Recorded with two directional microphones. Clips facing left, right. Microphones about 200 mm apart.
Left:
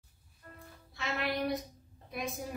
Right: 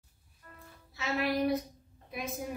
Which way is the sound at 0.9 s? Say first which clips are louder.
Right 4 dB; centre (ahead or behind).